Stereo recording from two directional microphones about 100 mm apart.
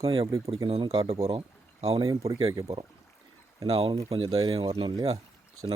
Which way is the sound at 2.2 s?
35° right (ahead or behind).